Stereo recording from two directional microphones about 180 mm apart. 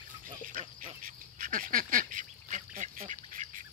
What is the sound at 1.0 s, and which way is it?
Duck, 50° right (ahead or behind).